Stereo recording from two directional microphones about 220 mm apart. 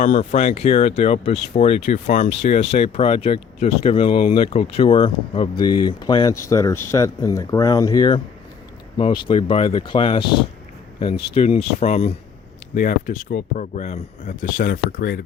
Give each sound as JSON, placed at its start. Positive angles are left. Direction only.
{"t": 0.0, "sound": "speech", "side_deg": 35}
{"t": 11.3, "sound": "speech", "side_deg": 30}